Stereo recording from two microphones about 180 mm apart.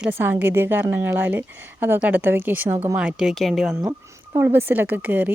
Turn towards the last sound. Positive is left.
turn(degrees=-10)  # may be behind; listen again after turning